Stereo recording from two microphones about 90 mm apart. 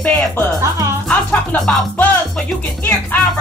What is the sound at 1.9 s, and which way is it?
Speech, 20° left (ahead or behind).